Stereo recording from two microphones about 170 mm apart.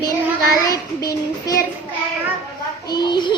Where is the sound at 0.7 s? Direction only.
20° left (ahead or behind).